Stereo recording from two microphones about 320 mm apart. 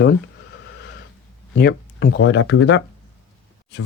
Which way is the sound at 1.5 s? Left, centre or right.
Left.